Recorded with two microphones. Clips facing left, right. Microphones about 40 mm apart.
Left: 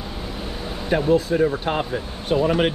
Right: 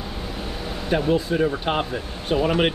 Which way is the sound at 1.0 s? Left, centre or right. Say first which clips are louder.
Left 4 dB; centre.